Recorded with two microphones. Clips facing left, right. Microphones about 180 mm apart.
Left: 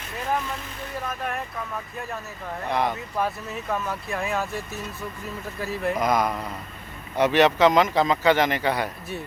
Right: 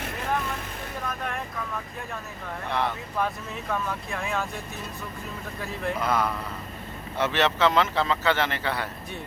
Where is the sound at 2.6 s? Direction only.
15° left (ahead or behind).